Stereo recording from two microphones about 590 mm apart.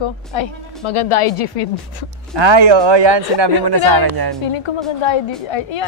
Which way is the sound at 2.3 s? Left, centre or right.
Right.